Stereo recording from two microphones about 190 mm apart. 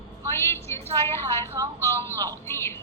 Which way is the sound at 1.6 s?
20° right (ahead or behind).